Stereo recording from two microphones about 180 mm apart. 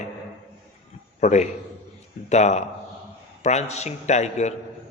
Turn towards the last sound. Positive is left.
turn(degrees=40)  # may be behind; listen again after turning